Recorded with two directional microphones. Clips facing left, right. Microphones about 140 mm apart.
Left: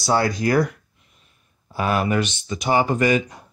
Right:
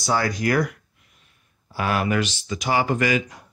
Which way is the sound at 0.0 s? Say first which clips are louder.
Left 3 dB; 30° left (ahead or behind).